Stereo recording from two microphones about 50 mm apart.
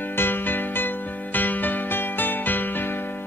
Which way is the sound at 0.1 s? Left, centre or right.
Left.